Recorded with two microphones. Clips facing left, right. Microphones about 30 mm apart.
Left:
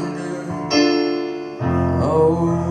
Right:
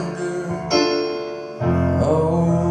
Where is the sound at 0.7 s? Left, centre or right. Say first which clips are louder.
Left 3 dB; centre.